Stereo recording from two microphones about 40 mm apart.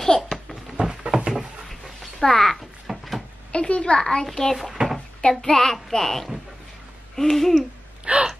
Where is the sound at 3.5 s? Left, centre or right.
Left.